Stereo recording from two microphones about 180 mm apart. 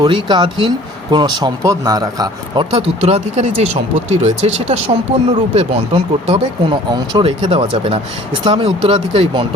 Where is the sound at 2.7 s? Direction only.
35° right (ahead or behind).